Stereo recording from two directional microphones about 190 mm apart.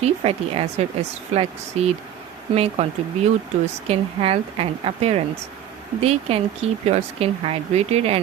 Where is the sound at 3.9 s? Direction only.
30° right (ahead or behind).